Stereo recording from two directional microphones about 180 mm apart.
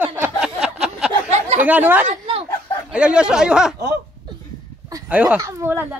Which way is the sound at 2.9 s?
5° right (ahead or behind).